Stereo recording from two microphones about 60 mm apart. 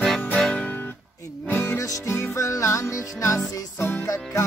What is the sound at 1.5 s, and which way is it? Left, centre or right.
Music, left.